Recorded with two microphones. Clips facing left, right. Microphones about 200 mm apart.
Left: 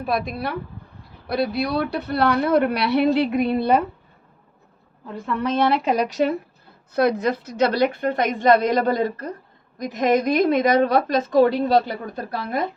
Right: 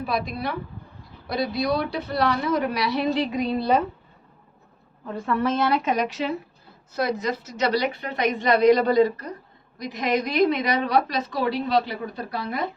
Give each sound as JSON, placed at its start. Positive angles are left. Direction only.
{"t": 0.0, "sound": "a woman's voice", "side_deg": 55}
{"t": 5.7, "sound": "speech", "side_deg": 30}
{"t": 6.9, "sound": "a woman's voice", "side_deg": 55}